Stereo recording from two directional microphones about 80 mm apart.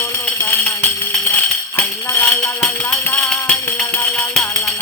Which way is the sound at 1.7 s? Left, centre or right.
Left.